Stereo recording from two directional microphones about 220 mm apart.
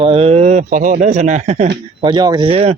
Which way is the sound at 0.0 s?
25° right (ahead or behind).